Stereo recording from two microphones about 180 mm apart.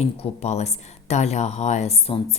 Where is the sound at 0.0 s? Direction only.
35° left (ahead or behind).